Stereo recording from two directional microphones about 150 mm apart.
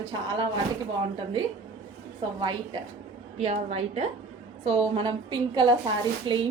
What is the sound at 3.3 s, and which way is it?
A woman's voice, 45° right (ahead or behind).